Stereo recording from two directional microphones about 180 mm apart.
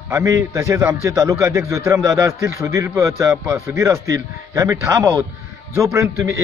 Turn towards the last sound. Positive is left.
turn(degrees=-15)  # may be behind; listen again after turning